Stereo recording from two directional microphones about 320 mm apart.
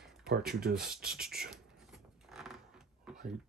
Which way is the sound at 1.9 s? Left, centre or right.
Centre.